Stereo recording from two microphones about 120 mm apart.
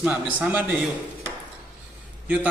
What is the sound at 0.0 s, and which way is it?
Speech, 10° right (ahead or behind).